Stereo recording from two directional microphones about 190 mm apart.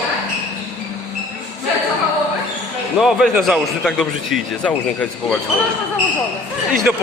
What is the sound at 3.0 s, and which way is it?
A man's voice, centre (ahead or behind).